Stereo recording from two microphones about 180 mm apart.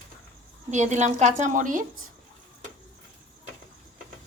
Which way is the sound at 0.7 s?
40° right (ahead or behind).